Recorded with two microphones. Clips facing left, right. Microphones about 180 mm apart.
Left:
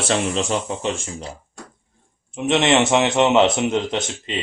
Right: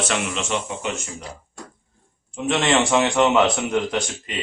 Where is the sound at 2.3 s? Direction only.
20° left (ahead or behind).